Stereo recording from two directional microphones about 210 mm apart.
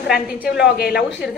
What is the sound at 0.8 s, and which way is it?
Speech, 45° left (ahead or behind).